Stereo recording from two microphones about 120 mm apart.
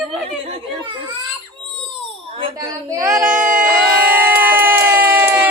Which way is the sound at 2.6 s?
30° right (ahead or behind).